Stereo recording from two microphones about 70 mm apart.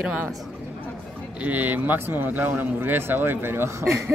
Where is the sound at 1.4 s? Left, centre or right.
Right.